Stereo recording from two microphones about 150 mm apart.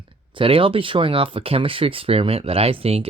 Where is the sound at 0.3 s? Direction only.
35° right (ahead or behind).